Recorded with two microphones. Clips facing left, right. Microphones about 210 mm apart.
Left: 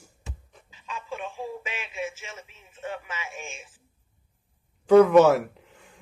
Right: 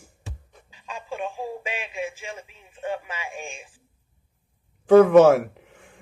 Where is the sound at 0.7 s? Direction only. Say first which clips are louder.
Right 2 dB; 35° right (ahead or behind).